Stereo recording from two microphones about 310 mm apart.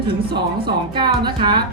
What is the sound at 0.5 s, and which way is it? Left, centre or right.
Speech, centre.